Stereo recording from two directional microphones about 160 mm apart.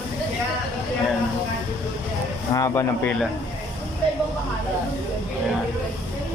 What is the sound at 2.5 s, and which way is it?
Speech, 20° left (ahead or behind).